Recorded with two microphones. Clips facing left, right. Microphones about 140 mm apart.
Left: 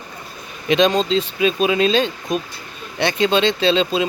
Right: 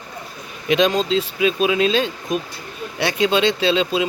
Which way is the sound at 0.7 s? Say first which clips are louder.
Left 1 dB; 5° right (ahead or behind).